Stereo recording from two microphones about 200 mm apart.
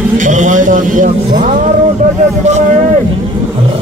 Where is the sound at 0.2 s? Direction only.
40° right (ahead or behind).